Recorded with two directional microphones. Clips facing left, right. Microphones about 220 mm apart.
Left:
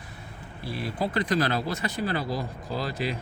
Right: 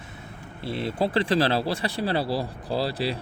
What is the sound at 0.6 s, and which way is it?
Speech, 25° right (ahead or behind).